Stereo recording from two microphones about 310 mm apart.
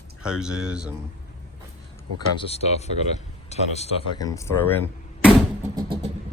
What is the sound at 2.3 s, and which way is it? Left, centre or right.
Speech, centre.